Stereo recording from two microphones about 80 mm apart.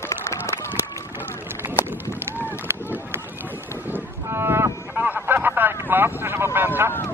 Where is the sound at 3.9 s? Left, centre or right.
Right.